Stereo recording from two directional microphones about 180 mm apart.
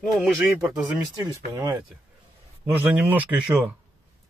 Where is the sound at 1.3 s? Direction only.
15° right (ahead or behind).